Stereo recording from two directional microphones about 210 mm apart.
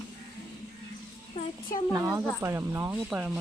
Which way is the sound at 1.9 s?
15° right (ahead or behind).